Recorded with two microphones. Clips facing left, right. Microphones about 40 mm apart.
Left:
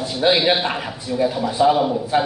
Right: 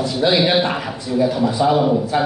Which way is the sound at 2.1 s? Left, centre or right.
Centre.